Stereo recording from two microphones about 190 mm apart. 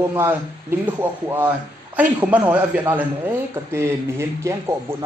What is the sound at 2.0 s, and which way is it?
A man's voice, 10° right (ahead or behind).